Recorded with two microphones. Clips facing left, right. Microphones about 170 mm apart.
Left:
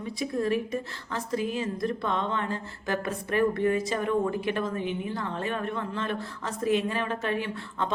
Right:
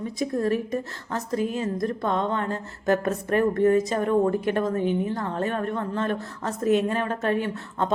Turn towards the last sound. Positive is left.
turn(degrees=-45)  # may be behind; listen again after turning